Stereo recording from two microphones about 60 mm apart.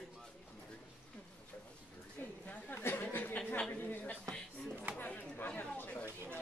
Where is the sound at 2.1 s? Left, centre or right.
Left.